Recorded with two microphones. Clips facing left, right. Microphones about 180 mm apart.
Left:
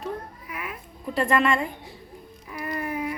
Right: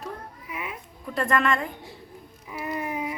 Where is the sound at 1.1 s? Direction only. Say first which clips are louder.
Left 2 dB; 5° left (ahead or behind).